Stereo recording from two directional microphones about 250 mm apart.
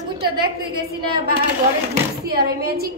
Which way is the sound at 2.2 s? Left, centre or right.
Right.